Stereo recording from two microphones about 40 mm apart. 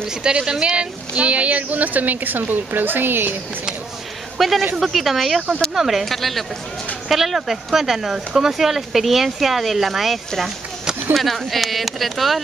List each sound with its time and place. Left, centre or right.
0.1 s speech: right
1.1 s a woman's voice: right
4.4 s speech: centre